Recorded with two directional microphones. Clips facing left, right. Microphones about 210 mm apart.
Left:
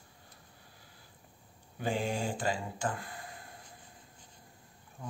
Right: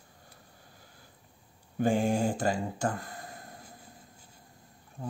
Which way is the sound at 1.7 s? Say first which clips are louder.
Right 7 dB; 45° right (ahead or behind).